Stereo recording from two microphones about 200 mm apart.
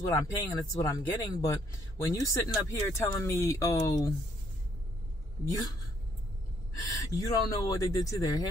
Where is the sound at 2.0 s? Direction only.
15° left (ahead or behind).